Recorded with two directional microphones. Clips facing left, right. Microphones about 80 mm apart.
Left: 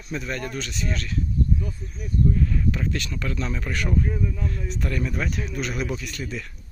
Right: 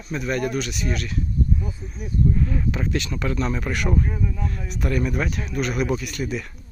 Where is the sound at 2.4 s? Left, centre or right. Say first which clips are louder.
Right 1 dB; right.